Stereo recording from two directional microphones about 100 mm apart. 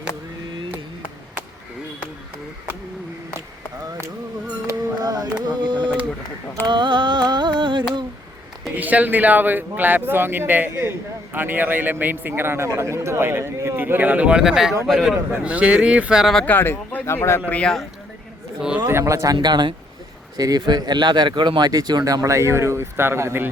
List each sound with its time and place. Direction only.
4.6 s music: 40° right (ahead or behind)
6.7 s carnatic music: 50° right (ahead or behind)
8.7 s a man's voice: 15° right (ahead or behind); by 15.2 s centre (ahead or behind)
15.4 s speech: 10° right (ahead or behind)
16.5 s speech: 20° left (ahead or behind)
17.5 s speech: 10° left (ahead or behind)
18.9 s speech: 25° right (ahead or behind)